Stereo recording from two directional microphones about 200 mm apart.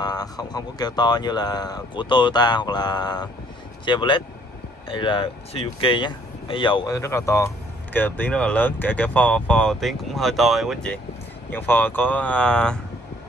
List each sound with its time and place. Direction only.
0.0 s speech: 20° left (ahead or behind)